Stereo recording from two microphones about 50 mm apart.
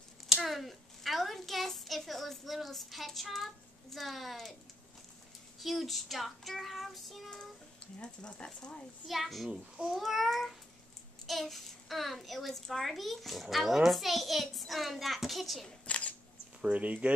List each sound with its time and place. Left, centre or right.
0.4 s a child's voice: centre
5.6 s a child's voice: centre
8.0 s a child's voice: centre
9.0 s a child's voice: centre
9.5 s a child's voice: centre
9.9 s a child's voice: centre
15.8 s single-lens reflex camera: left
16.6 s speech: right